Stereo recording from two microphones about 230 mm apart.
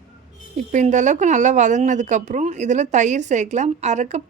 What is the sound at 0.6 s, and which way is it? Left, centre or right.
A woman's voice, right.